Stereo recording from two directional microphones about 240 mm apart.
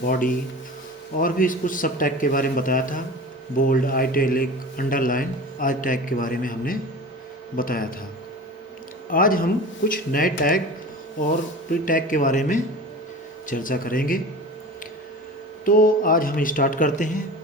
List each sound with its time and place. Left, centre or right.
0.0 s a man's voice: left
9.0 s a man's voice: left
11.7 s a man's voice: left
15.6 s a man's voice: left